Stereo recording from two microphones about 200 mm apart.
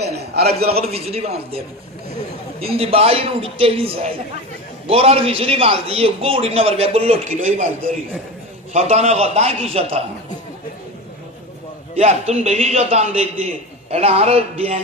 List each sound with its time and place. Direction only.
0.0 s a sound: 55° right (ahead or behind)
0.7 s a man's voice: 30° right (ahead or behind)
8.7 s a man's voice: 35° right (ahead or behind)
11.9 s a man's voice: 30° right (ahead or behind)